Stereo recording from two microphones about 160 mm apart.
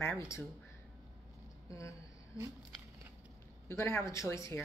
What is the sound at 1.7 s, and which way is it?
Speech, 20° left (ahead or behind).